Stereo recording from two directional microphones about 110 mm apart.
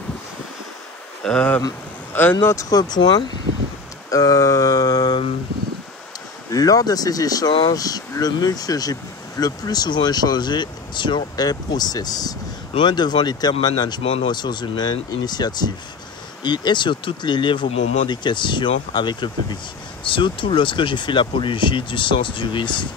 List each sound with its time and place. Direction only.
1.2 s speech: 10° left (ahead or behind)
2.4 s speech: 30° left (ahead or behind)
6.5 s speech: 35° left (ahead or behind)